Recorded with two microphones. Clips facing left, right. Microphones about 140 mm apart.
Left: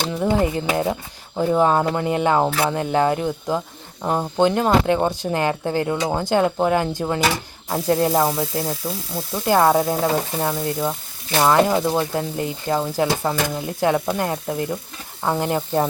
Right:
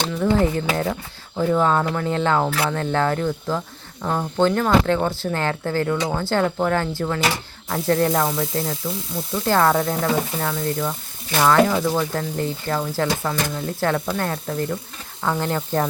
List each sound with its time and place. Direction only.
0.1 s speech: 20° left (ahead or behind)
0.7 s sizzle: 20° left (ahead or behind)
1.5 s speech: 20° left (ahead or behind)
7.7 s sizzle: 20° left (ahead or behind)
11.3 s speech: 20° left (ahead or behind)